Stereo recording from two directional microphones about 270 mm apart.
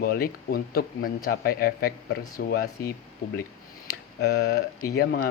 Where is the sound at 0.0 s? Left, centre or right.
Left.